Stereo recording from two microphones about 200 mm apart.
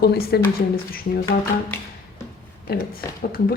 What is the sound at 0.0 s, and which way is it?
Speech, 50° left (ahead or behind).